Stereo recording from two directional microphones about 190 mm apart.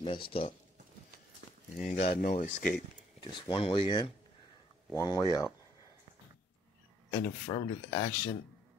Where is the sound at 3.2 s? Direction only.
25° left (ahead or behind).